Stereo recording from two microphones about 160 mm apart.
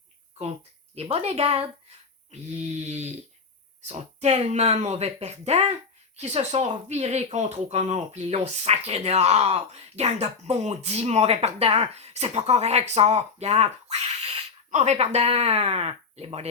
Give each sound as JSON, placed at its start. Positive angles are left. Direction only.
{"t": 0.9, "sound": "speech", "side_deg": -40}